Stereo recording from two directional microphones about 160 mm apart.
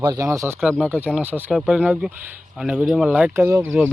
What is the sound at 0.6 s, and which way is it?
Speech, 5° right (ahead or behind).